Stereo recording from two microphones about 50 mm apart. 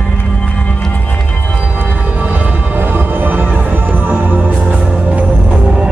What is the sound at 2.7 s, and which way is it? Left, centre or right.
Music, right.